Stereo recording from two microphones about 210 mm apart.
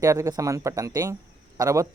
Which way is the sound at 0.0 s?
15° right (ahead or behind).